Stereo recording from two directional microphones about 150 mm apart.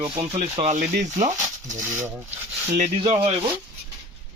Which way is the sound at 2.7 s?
50° right (ahead or behind).